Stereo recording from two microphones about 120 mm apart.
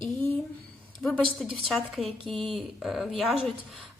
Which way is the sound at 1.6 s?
Centre (ahead or behind).